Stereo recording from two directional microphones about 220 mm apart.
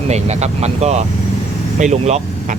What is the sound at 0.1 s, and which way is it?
Speech, 30° right (ahead or behind).